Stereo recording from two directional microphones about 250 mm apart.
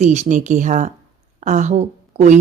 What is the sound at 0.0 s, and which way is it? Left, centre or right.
A woman's voice, right.